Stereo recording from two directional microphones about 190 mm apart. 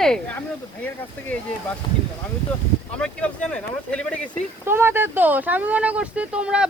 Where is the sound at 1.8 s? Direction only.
25° left (ahead or behind).